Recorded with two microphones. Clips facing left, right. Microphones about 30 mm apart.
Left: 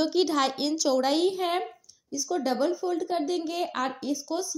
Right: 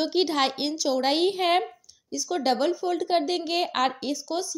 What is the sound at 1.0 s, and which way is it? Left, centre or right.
A woman's voice, right.